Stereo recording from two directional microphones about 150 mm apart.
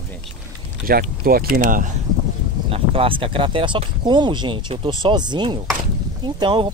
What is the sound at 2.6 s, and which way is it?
Speech, 40° right (ahead or behind).